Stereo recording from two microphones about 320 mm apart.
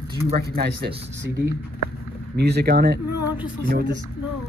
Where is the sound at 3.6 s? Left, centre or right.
Right.